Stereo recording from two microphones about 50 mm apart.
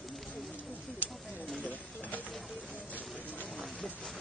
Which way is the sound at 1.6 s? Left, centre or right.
Left.